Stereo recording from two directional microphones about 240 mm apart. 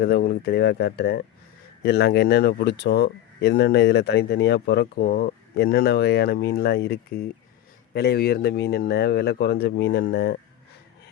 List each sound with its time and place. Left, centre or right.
0.0 s speech: left